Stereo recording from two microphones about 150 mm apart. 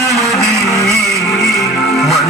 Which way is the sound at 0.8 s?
Centre (ahead or behind).